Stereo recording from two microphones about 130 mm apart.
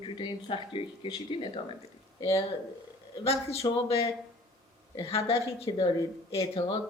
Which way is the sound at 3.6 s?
35° left (ahead or behind).